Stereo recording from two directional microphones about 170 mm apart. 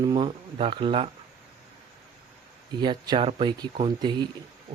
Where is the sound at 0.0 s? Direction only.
25° right (ahead or behind).